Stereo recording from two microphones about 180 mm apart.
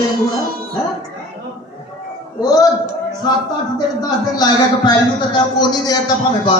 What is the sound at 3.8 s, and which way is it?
A man's voice, 20° left (ahead or behind).